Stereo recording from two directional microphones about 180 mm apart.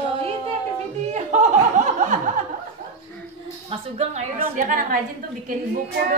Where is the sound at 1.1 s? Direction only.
40° right (ahead or behind).